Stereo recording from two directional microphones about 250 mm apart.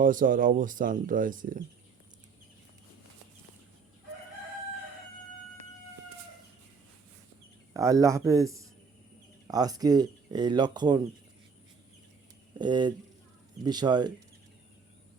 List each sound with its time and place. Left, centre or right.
0.0 s speech: right
7.7 s speech: centre
12.5 s speech: centre